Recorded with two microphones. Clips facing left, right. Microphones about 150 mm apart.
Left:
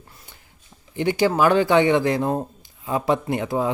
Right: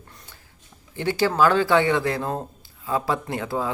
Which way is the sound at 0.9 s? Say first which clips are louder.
Left 2 dB; 15° left (ahead or behind).